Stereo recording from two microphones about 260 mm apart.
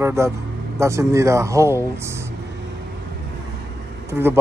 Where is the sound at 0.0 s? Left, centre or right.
Centre.